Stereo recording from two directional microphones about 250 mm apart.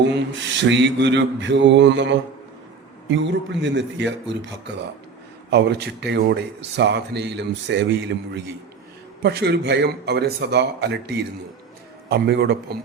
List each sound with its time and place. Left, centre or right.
0.6 s speech: right
9.2 s speech: right